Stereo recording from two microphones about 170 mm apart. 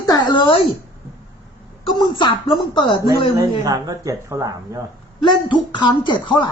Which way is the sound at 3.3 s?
20° right (ahead or behind).